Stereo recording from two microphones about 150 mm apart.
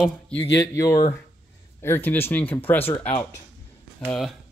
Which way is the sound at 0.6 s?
20° left (ahead or behind).